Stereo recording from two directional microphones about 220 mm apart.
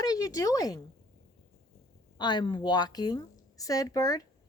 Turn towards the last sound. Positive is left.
turn(degrees=15)  # may be behind; listen again after turning